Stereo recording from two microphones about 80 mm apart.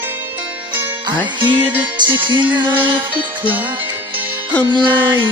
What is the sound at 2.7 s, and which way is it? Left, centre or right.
Music, right.